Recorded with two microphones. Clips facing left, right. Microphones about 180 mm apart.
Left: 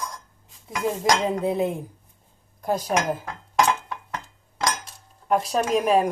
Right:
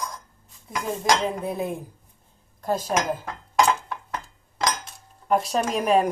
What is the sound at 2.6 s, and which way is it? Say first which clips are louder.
Dishes: left 1 dB; 10° left (ahead or behind).